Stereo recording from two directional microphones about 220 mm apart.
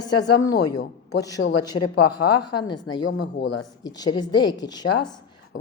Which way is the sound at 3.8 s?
15° left (ahead or behind).